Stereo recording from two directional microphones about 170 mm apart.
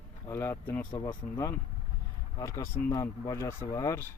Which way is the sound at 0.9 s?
25° left (ahead or behind).